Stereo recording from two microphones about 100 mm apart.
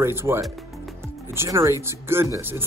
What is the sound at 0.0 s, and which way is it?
Speech, 25° right (ahead or behind).